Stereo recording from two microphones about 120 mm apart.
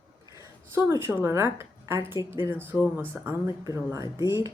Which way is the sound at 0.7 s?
20° right (ahead or behind).